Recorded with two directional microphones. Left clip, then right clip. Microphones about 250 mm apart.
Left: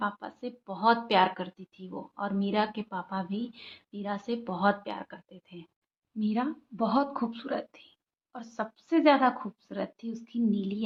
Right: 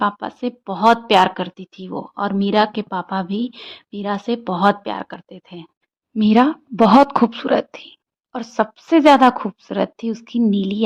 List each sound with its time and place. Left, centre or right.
0.0 s speech: right